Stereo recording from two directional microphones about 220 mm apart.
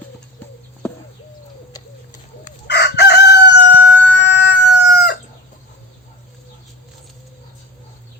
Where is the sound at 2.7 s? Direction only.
50° left (ahead or behind).